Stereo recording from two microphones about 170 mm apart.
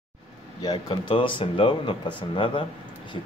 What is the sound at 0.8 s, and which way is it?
Speech, 30° left (ahead or behind).